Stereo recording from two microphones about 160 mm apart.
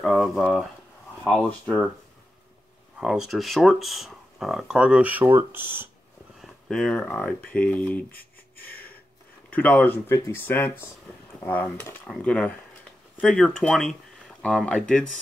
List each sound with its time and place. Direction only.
0.0 s speech: centre (ahead or behind)
3.0 s speech: centre (ahead or behind)
6.4 s speech: 5° left (ahead or behind)
9.5 s speech: 10° left (ahead or behind)